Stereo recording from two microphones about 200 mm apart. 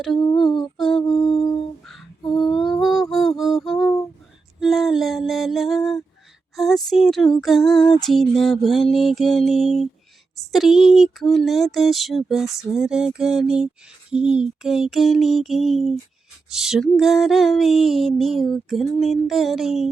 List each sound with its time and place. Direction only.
0.3 s female singing: centre (ahead or behind)
1.0 s a sound: 20° left (ahead or behind)
1.8 s lullaby: centre (ahead or behind)
4.6 s music: centre (ahead or behind)
6.6 s female singing: centre (ahead or behind)